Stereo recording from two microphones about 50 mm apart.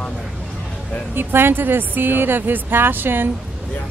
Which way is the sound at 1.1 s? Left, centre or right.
Right.